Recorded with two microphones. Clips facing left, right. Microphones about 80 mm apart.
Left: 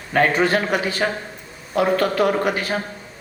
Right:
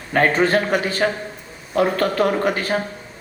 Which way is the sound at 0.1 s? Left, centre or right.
Right.